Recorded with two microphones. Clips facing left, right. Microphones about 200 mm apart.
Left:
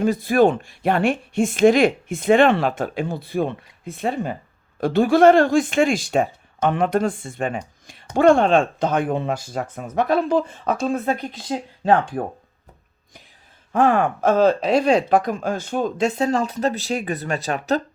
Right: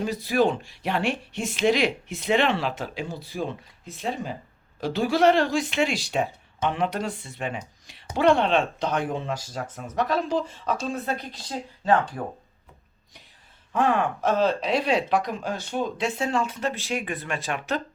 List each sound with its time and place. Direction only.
0.0 s speech: 50° left (ahead or behind)
13.7 s speech: 50° left (ahead or behind)